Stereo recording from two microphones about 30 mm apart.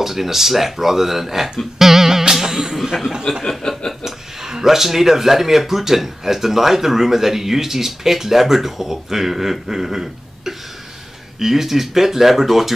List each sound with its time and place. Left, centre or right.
0.0 s speech: centre
1.8 s music: centre
3.4 s chuckle: centre
4.0 s speech: centre